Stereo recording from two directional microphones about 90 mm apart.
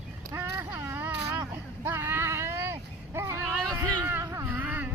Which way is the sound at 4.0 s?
25° right (ahead or behind).